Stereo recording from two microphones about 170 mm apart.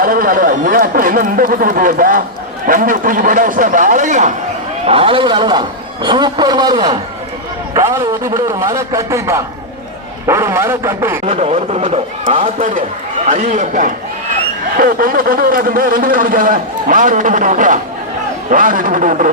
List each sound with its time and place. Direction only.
0.0 s a man's voice: 55° right (ahead or behind)
4.9 s a man's voice: 30° right (ahead or behind); by 11.2 s 15° right (ahead or behind)
11.3 s a man's voice: 40° right (ahead or behind)